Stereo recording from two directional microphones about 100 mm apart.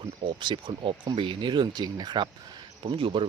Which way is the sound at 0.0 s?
60° right (ahead or behind).